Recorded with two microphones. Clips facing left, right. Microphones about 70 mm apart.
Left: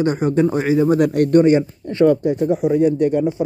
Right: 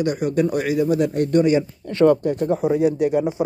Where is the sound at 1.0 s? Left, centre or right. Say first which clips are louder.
Left 4 dB; left.